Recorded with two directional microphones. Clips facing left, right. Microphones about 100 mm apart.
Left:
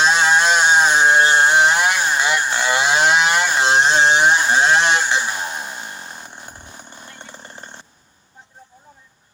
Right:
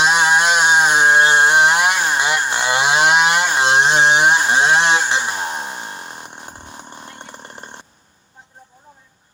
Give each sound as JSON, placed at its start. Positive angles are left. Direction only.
{"t": 0.0, "sound": "chainsaw", "side_deg": -15}
{"t": 7.3, "sound": "chainsaw", "side_deg": -60}